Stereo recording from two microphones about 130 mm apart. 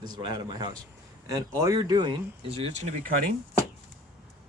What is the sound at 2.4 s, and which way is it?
Speech, 50° right (ahead or behind).